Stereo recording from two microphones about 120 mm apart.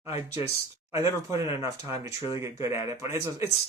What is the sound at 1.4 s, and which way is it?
Speech, 25° right (ahead or behind).